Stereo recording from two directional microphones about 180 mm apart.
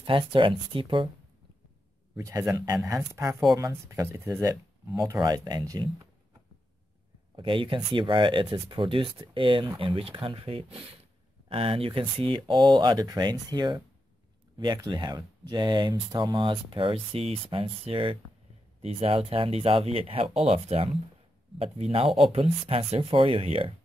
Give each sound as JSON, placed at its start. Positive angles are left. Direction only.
{"t": 0.0, "sound": "speech", "side_deg": -30}
{"t": 2.1, "sound": "speech", "side_deg": -20}
{"t": 7.3, "sound": "speech", "side_deg": -30}